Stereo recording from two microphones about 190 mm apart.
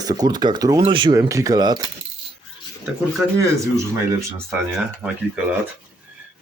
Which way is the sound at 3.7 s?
15° right (ahead or behind).